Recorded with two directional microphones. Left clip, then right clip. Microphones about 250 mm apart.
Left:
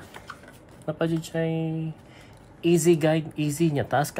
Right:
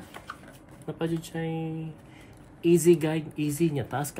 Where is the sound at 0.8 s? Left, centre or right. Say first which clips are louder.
Left 4 dB; left.